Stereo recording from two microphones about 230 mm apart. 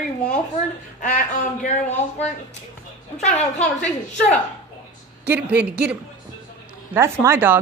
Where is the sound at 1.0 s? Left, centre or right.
Left.